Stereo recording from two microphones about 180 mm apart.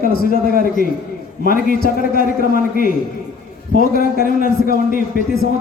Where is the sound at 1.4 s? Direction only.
50° left (ahead or behind).